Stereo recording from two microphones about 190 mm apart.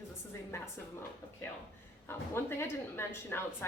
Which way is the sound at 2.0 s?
10° left (ahead or behind).